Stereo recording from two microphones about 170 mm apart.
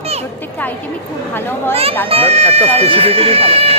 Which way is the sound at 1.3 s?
15° left (ahead or behind).